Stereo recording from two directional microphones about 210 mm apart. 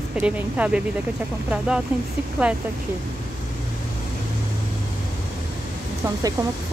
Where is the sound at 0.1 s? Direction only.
5° right (ahead or behind).